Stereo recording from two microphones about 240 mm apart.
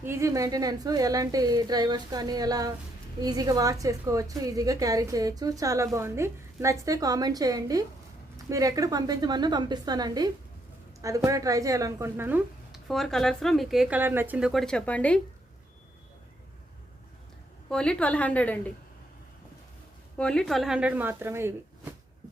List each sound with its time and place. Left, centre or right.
0.0 s a woman's voice: centre
17.7 s speech: centre
20.1 s speech: centre